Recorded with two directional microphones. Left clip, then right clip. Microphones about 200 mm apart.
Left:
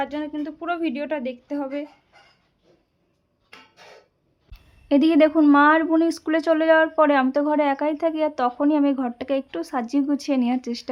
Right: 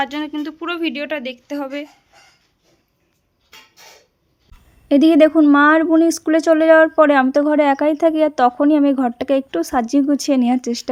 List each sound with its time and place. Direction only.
0.0 s speech: centre (ahead or behind)
4.9 s speech: 25° right (ahead or behind)